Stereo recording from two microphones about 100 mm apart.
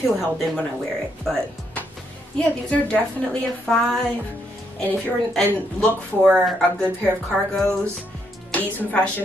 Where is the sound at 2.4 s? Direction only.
10° left (ahead or behind).